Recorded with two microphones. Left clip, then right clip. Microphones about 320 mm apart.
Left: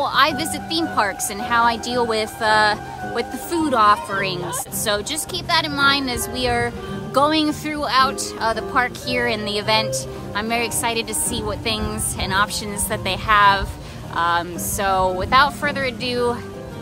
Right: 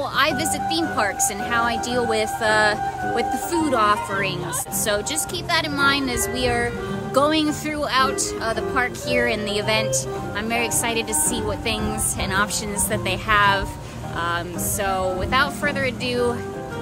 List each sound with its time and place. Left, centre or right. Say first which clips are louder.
0.0 s speech: left 3 dB; centre
5.5 s speech: left 2 dB; centre